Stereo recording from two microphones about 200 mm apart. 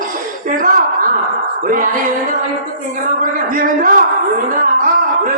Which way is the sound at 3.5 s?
45° right (ahead or behind).